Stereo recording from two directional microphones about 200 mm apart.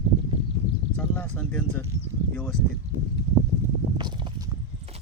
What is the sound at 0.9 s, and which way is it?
Speech, 5° left (ahead or behind).